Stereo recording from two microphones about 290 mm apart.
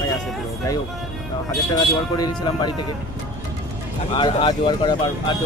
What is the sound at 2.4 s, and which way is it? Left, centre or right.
Speech, centre.